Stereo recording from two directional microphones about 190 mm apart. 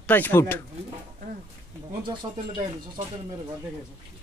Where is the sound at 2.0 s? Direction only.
25° right (ahead or behind).